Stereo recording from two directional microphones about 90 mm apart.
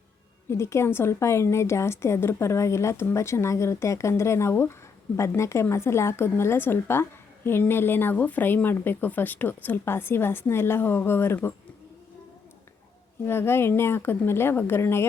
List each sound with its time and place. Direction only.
0.5 s a woman's voice: 30° left (ahead or behind)
13.2 s a woman's voice: 25° left (ahead or behind)